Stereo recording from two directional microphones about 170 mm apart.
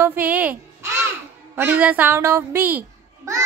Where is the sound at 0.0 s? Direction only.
10° right (ahead or behind).